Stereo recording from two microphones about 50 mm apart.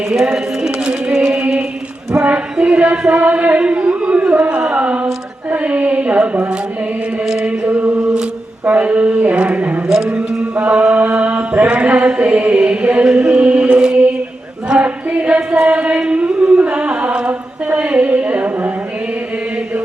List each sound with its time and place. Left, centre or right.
0.2 s a sound: centre
3.2 s mantra: right
5.5 s speech: right
7.4 s chant: right
8.6 s mantra: right
9.3 s a sound: right
10.7 s mantra: right
14.8 s a sound: right
15.6 s chant: right
17.7 s music: right